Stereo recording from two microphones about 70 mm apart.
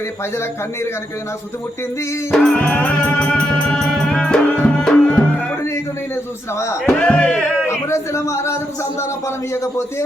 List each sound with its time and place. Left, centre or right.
2.3 s music: centre
7.0 s music: centre
7.7 s a man's voice: left